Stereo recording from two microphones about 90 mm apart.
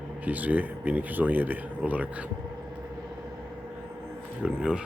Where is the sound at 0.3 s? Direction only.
20° right (ahead or behind).